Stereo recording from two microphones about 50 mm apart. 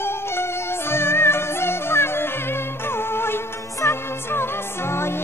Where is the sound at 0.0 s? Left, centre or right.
Left.